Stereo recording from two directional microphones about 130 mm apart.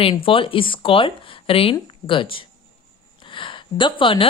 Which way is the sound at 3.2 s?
40° left (ahead or behind).